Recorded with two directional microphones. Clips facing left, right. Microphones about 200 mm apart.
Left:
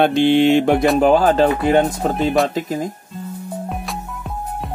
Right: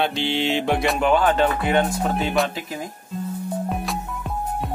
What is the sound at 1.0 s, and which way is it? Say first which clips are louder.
Speech: left 3 dB; 35° left (ahead or behind).